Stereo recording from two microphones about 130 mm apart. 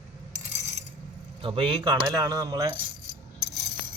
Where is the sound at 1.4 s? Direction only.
45° right (ahead or behind).